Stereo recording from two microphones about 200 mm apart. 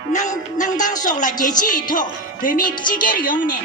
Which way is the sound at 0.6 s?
40° left (ahead or behind).